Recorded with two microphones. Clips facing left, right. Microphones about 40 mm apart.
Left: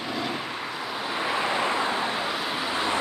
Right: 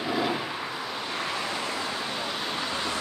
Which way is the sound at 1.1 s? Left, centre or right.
Centre.